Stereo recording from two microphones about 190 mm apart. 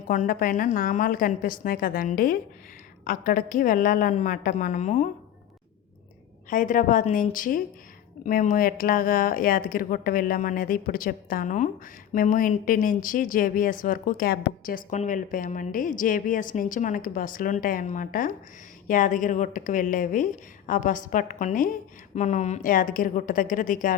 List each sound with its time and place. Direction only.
0.1 s speech: 45° left (ahead or behind)
6.5 s speech: 45° left (ahead or behind)